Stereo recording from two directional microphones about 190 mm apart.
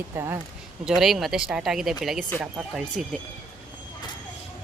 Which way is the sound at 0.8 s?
Centre (ahead or behind).